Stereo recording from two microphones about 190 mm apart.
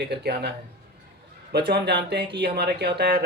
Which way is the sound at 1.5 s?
55° right (ahead or behind).